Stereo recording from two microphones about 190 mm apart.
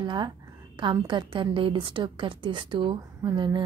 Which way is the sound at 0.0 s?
25° right (ahead or behind).